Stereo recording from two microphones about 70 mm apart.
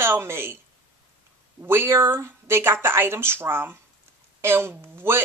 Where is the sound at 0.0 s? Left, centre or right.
Right.